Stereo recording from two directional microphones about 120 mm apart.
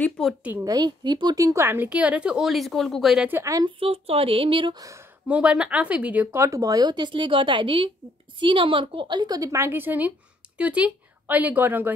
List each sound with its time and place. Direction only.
0.4 s speech: 15° right (ahead or behind)
0.7 s speech: 35° right (ahead or behind); by 3.3 s centre (ahead or behind)
3.3 s a woman's voice: 20° right (ahead or behind)
3.6 s speech: 50° right (ahead or behind)
4.7 s a woman's voice: 25° right (ahead or behind)
5.3 s speech: 10° right (ahead or behind)